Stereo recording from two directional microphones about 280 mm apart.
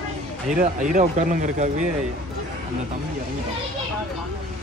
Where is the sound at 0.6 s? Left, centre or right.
Right.